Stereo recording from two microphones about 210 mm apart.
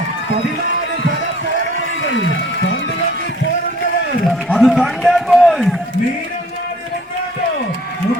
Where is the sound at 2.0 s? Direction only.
60° left (ahead or behind).